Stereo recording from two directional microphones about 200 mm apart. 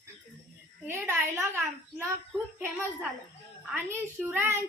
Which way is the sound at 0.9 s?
15° right (ahead or behind).